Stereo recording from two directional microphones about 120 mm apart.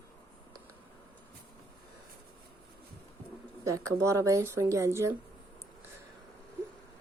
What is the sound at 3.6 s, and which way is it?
Speech, 25° right (ahead or behind).